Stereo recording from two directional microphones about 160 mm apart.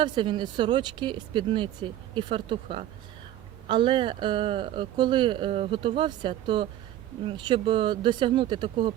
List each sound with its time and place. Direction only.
0.0 s speech: 30° right (ahead or behind)